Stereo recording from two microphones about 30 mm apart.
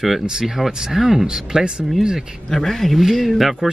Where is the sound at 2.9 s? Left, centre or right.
Centre.